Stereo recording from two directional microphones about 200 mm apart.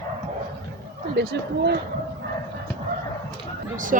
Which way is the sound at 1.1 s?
55° right (ahead or behind).